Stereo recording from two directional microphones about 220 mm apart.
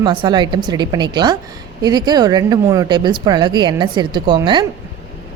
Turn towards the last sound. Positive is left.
turn(degrees=-20)  # may be behind; listen again after turning